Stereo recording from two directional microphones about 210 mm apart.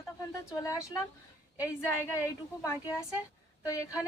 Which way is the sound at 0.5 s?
15° left (ahead or behind).